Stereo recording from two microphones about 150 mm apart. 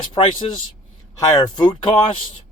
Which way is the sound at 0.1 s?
30° left (ahead or behind).